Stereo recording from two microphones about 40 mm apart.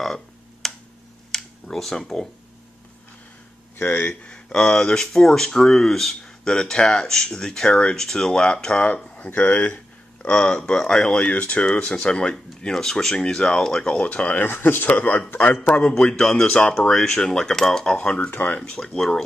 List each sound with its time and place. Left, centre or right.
0.0 s a sound: centre
4.1 s speech: left
8.8 s speech: left
10.2 s speech: left
11.1 s speech: left
12.7 s speech: centre
13.9 s speech: left
14.4 s speech: left
14.9 s speech: left
15.6 s speech: left
16.2 s speech: centre
18.6 s speech: centre